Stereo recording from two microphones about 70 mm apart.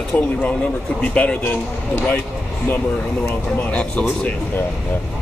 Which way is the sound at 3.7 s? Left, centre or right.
Centre.